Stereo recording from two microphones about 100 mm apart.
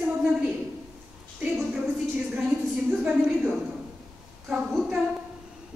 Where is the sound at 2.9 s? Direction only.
10° right (ahead or behind).